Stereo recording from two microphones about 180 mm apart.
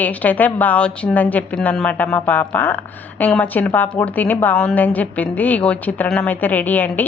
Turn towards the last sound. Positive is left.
turn(degrees=10)  # may be behind; listen again after turning